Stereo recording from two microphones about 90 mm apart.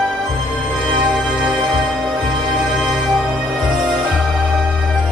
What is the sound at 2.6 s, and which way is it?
Music, 5° right (ahead or behind).